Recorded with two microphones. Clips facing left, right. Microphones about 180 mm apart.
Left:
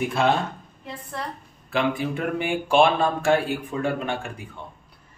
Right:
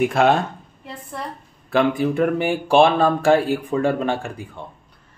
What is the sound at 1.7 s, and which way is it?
Speech, 40° right (ahead or behind).